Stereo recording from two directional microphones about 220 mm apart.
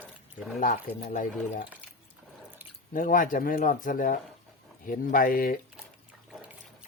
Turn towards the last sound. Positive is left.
turn(degrees=40)  # may be behind; listen again after turning